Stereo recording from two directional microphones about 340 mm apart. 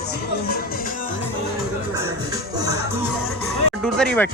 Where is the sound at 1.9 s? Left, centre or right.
Centre.